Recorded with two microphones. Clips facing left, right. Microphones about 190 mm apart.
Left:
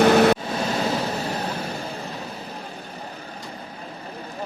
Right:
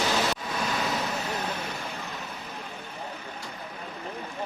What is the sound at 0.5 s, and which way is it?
Vehicle, 30° left (ahead or behind).